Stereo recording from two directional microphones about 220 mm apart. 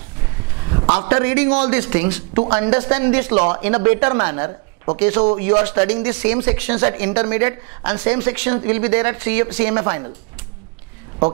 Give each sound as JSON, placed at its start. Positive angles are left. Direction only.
{"t": 1.0, "sound": "speech", "side_deg": -15}
{"t": 3.3, "sound": "speech", "side_deg": -25}